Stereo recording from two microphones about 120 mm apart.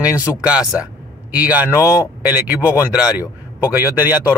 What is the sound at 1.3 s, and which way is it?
Speech, 10° right (ahead or behind).